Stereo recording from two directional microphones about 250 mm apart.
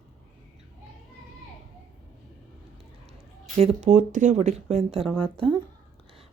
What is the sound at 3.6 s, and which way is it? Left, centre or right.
A woman's voice, right.